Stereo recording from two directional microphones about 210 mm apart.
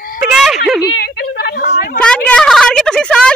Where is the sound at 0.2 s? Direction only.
Centre (ahead or behind).